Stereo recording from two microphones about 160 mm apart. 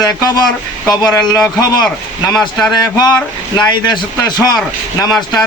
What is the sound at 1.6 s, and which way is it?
Speech, 25° left (ahead or behind).